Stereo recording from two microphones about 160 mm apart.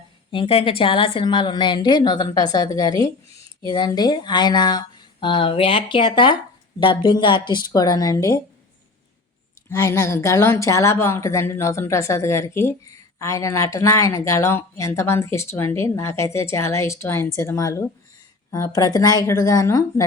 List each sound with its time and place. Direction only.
0.3 s a woman's voice: 35° left (ahead or behind)
9.6 s a woman's voice: 20° left (ahead or behind)